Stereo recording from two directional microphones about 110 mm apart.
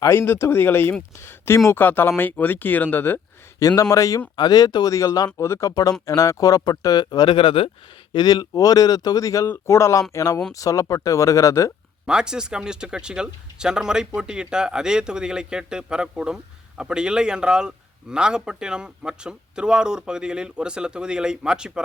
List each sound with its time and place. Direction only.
0.0 s speech: 20° left (ahead or behind)
3.6 s speech: 30° left (ahead or behind); by 7.7 s 55° left (ahead or behind)
8.1 s speech: 40° left (ahead or behind)
12.0 s speech: 5° right (ahead or behind)